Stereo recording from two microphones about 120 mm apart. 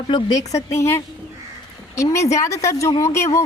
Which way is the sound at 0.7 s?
20° left (ahead or behind).